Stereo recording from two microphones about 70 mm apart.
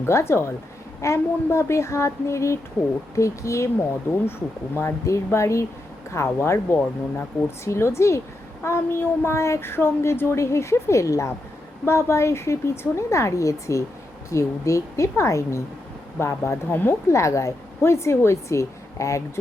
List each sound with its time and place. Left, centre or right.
0.0 s speech: left
16.6 s speech: left
17.1 s speech: left